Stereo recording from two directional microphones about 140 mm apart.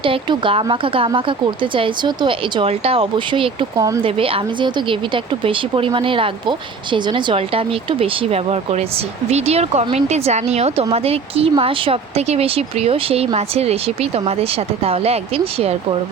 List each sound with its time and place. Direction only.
0.0 s speech: 40° right (ahead or behind)
3.8 s speech: 25° right (ahead or behind)
4.0 s speech: 40° right (ahead or behind)